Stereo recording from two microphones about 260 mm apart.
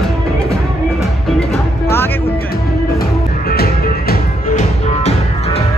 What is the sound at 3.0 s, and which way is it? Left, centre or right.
Music, left.